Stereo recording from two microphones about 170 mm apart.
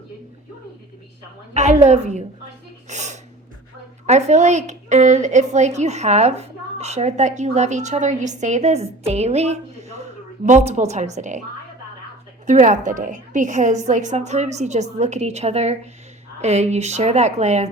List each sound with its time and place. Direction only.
1.5 s a woman's voice: 45° right (ahead or behind)
2.9 s a sound: 45° right (ahead or behind)
4.0 s a woman's voice: 40° right (ahead or behind)
12.5 s a woman's voice: 45° right (ahead or behind)